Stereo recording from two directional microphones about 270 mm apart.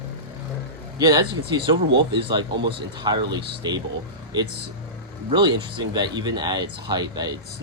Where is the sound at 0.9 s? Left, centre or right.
Centre.